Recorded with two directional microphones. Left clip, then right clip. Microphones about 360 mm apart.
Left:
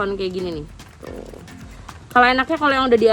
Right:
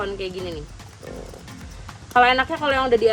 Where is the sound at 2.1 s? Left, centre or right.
Left.